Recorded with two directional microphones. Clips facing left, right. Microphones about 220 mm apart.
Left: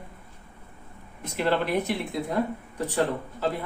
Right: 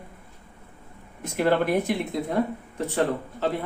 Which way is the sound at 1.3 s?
50° right (ahead or behind).